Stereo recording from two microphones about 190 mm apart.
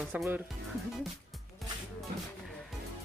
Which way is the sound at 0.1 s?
10° right (ahead or behind).